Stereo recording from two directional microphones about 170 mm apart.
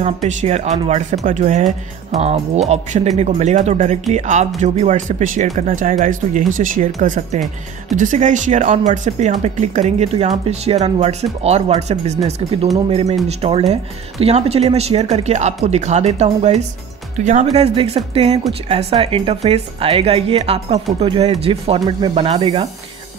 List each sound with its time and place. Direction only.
0.0 s speech: 40° right (ahead or behind)